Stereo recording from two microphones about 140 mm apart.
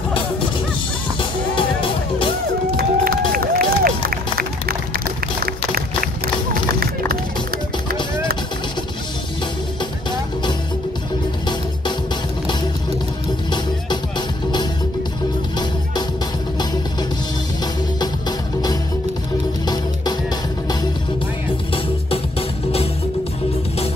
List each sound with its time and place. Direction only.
1.5 s music: 35° left (ahead or behind)
2.8 s run: 90° right
4.4 s music: 90° right
6.7 s run: 90° right
13.5 s music: 30° left (ahead or behind)
19.6 s music: 30° left (ahead or behind)